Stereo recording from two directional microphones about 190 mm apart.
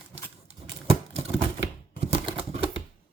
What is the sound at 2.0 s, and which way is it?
Typewriter, 30° right (ahead or behind).